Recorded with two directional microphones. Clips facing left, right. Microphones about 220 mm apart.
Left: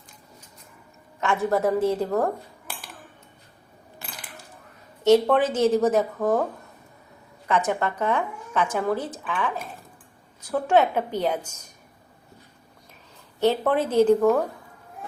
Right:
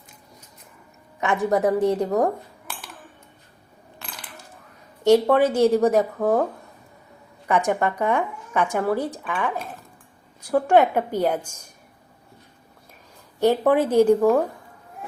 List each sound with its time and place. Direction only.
1.2 s speech: 15° right (ahead or behind)
5.0 s speech: 10° right (ahead or behind)
7.4 s speech: 15° right (ahead or behind)
10.4 s speech: 10° right (ahead or behind)
13.4 s speech: 10° right (ahead or behind)